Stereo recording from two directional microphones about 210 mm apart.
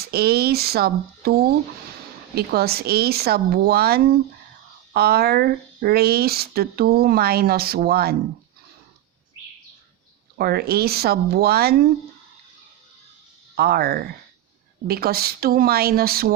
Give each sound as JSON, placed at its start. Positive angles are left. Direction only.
{"t": 0.0, "sound": "speech", "side_deg": -50}
{"t": 10.3, "sound": "speech", "side_deg": -45}
{"t": 13.6, "sound": "speech", "side_deg": -45}